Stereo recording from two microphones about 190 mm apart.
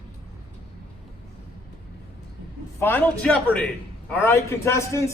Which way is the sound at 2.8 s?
10° left (ahead or behind).